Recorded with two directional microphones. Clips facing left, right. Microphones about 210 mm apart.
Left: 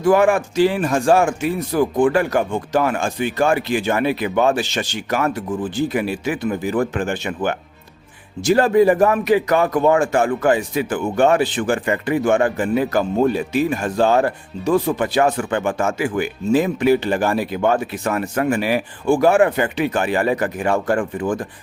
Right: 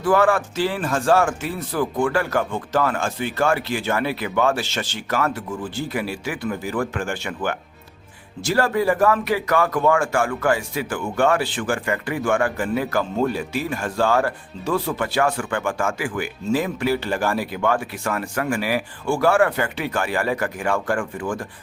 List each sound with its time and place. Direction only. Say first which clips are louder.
0.0 s speech: left 3 dB; 15° left (ahead or behind)